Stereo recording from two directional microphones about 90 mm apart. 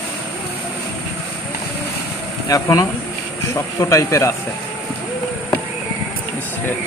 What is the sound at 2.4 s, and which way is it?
Speech, 40° left (ahead or behind).